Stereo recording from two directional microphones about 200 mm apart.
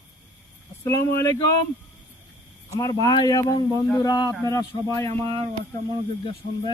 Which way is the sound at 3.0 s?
20° left (ahead or behind).